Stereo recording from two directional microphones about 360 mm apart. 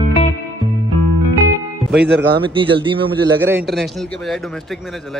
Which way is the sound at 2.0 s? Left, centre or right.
Right.